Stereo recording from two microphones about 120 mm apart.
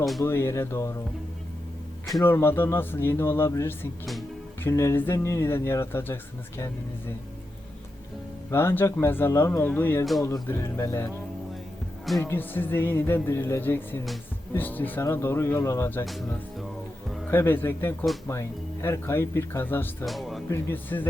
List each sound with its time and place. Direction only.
0.3 s speech: 20° left (ahead or behind)
2.2 s speech: 20° left (ahead or behind)
8.4 s speech: 20° left (ahead or behind)
12.2 s speech: 15° left (ahead or behind)
16.0 s speech: centre (ahead or behind)
17.2 s speech: 15° left (ahead or behind)
20.1 s speech: centre (ahead or behind)
20.5 s speech: 15° left (ahead or behind)